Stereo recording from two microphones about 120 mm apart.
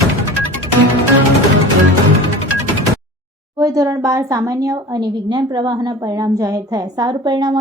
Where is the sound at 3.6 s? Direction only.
30° right (ahead or behind).